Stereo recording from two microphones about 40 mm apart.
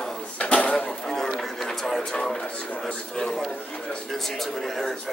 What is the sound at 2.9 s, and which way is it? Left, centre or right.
A man's voice, centre.